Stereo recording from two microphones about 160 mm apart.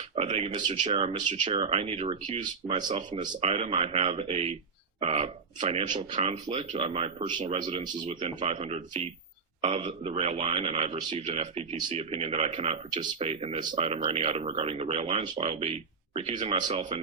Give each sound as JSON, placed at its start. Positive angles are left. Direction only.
{"t": 0.2, "sound": "speech", "side_deg": -40}
{"t": 2.8, "sound": "speech", "side_deg": -30}
{"t": 3.2, "sound": "speech", "side_deg": -40}
{"t": 8.2, "sound": "speech", "side_deg": -45}